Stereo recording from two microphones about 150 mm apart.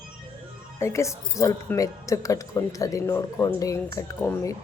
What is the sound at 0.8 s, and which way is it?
Speech, 20° left (ahead or behind).